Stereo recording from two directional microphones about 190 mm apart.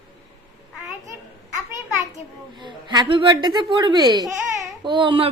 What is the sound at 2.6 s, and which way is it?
Speech, 25° right (ahead or behind).